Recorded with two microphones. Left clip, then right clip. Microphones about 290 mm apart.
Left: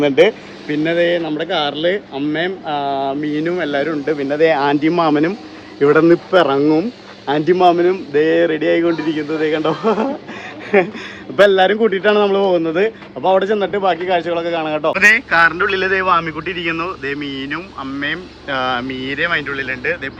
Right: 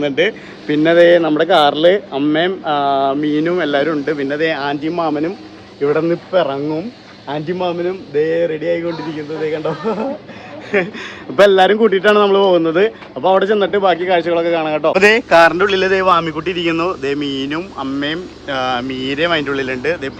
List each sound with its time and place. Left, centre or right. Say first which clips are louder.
0.0 s speech: left 4 dB; centre
0.7 s speech: right 6 dB; centre
4.4 s speech: left 4 dB; centre
11.3 s speech: right 2 dB; centre